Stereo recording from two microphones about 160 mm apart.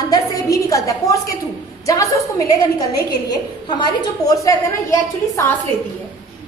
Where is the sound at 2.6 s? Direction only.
25° left (ahead or behind).